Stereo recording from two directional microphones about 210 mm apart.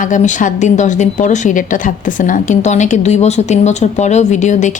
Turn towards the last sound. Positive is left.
turn(degrees=35)  # may be behind; listen again after turning